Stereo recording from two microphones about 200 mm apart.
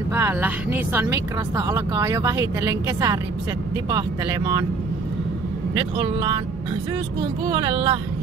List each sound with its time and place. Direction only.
0.1 s speech: 10° right (ahead or behind)
5.8 s speech: 25° right (ahead or behind)
7.4 s speech: 25° right (ahead or behind)